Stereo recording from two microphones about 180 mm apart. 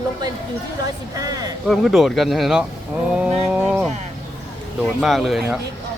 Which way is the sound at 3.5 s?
5° right (ahead or behind).